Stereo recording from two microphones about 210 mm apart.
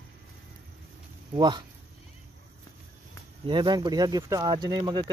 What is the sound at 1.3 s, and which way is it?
Speech, 20° right (ahead or behind).